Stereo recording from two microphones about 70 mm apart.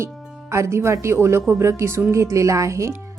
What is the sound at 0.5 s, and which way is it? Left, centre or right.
Speech, right.